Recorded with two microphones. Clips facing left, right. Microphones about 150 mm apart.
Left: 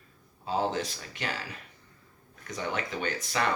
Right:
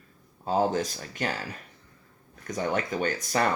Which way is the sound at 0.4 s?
45° right (ahead or behind).